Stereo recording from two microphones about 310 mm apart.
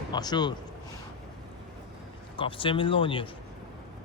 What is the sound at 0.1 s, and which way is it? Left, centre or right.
Speech, centre.